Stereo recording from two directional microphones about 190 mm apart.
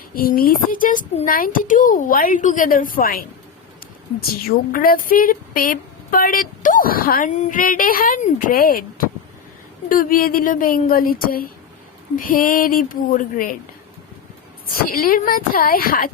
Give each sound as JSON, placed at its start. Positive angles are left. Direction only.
{"t": 0.1, "sound": "a woman's voice", "side_deg": 50}
{"t": 14.7, "sound": "a woman's voice", "side_deg": 50}